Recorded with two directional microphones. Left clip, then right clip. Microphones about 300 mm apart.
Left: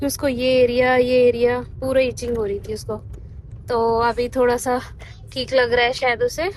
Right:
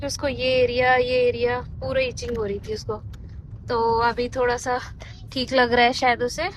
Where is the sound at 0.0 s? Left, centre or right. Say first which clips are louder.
Left 4 dB; centre.